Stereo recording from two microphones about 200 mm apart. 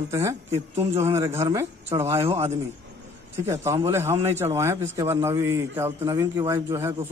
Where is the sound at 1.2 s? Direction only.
15° right (ahead or behind).